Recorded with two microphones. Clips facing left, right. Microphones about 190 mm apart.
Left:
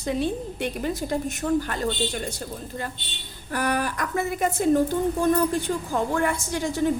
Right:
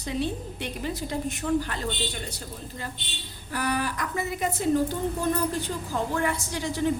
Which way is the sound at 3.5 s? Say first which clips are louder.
Left 3 dB; 50° left (ahead or behind).